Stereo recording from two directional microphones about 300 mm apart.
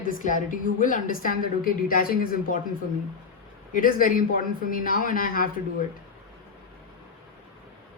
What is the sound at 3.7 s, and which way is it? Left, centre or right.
A woman's voice, left.